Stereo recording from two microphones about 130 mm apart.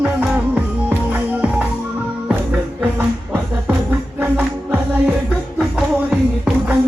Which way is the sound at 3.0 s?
15° right (ahead or behind).